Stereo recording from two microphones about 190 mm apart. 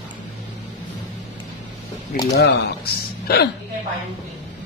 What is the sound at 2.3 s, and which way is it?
A man's voice, 55° left (ahead or behind).